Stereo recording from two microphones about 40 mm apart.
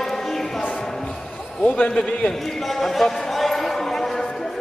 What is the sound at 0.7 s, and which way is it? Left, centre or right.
Music, centre.